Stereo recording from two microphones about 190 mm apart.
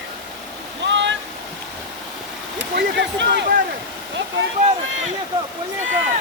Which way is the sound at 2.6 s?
65° right (ahead or behind).